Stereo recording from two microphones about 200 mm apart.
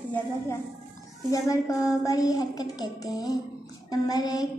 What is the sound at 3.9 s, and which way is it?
Child singing, 20° left (ahead or behind).